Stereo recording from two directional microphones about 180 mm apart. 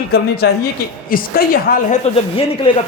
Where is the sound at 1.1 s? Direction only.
50° left (ahead or behind).